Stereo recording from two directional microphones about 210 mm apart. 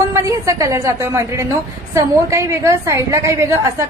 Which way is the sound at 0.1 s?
15° right (ahead or behind).